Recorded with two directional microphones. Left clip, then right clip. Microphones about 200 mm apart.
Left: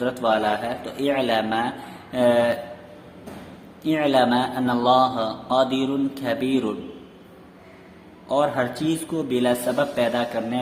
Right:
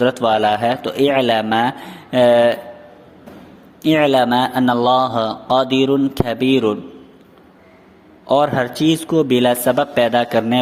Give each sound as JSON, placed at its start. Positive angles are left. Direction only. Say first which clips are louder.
{"t": 0.0, "sound": "a man's voice", "louder": "right 7 dB", "side_deg": -40}
{"t": 3.8, "sound": "a man's voice", "louder": "right 6 dB", "side_deg": -40}
{"t": 8.3, "sound": "a man's voice", "louder": "right 6 dB", "side_deg": -40}